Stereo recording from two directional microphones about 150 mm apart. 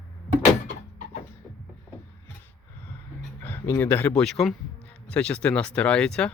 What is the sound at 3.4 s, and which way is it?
Speech, 10° left (ahead or behind).